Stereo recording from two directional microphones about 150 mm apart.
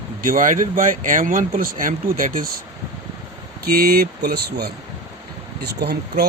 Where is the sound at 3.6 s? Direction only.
90° right.